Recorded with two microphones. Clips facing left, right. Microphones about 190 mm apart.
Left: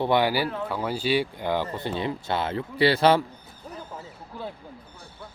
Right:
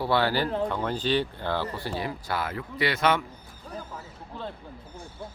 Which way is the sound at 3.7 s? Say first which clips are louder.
Right 1 dB; 20° left (ahead or behind).